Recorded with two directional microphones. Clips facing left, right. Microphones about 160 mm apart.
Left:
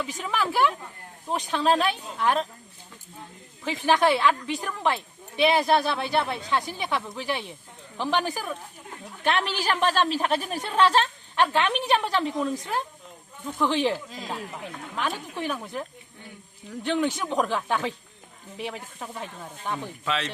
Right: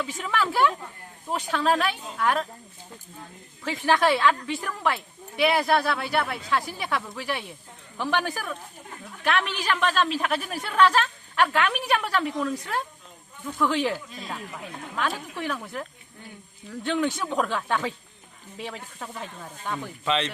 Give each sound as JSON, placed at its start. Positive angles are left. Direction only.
{"t": 0.2, "sound": "a woman's voice", "side_deg": 15}
{"t": 3.6, "sound": "a woman's voice", "side_deg": 15}
{"t": 9.2, "sound": "a woman's voice", "side_deg": 30}